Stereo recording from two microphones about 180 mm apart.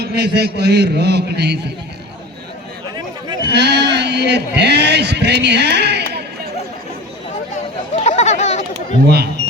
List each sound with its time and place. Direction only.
0.0 s speech: 65° right (ahead or behind)
3.4 s speech: 70° right (ahead or behind)
7.9 s chatter: 35° left (ahead or behind)
9.0 s speech: 65° right (ahead or behind)